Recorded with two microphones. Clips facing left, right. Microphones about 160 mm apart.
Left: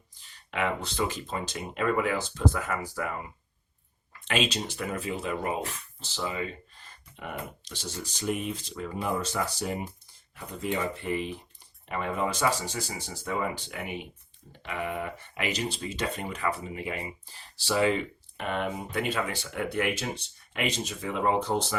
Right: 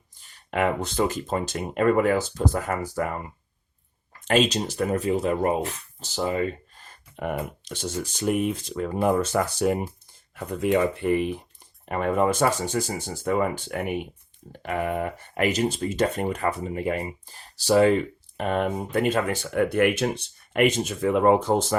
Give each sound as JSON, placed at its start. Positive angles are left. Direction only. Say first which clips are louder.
{"t": 0.5, "sound": "speech", "louder": "right 6 dB", "side_deg": -45}